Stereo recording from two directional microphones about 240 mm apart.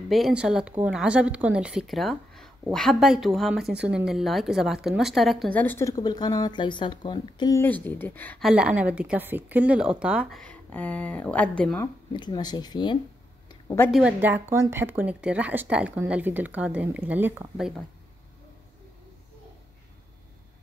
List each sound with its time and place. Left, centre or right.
0.1 s a woman's voice: centre
12.1 s speech: centre
13.5 s a sound: centre
13.9 s speech: centre